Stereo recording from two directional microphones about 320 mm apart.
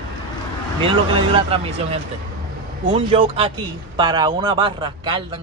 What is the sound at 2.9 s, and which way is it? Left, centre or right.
Speech, centre.